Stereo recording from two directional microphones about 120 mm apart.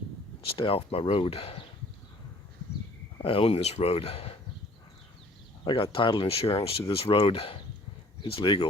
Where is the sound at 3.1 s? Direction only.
50° left (ahead or behind).